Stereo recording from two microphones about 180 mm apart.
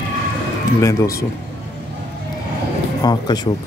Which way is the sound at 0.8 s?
15° left (ahead or behind).